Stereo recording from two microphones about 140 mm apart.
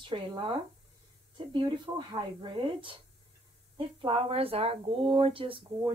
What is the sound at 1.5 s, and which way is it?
Speech, 35° right (ahead or behind).